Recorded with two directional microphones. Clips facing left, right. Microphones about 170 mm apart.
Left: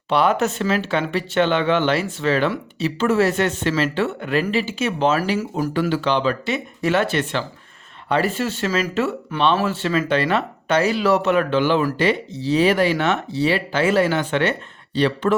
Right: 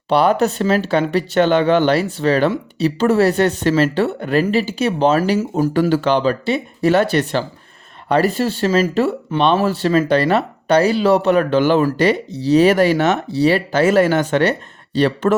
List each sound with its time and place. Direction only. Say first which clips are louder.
0.1 s speech: right 4 dB; 35° right (ahead or behind)